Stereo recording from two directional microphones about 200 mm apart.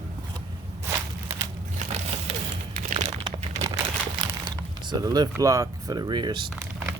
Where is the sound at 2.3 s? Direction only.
35° right (ahead or behind).